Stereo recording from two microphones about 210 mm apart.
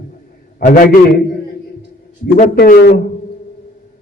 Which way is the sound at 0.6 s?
40° left (ahead or behind).